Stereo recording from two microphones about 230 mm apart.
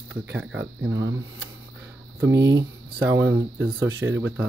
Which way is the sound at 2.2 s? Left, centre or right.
Centre.